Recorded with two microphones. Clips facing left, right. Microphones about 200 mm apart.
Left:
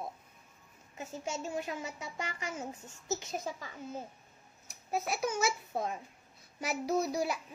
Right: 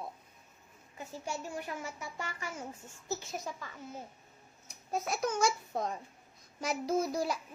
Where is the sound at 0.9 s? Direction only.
20° left (ahead or behind).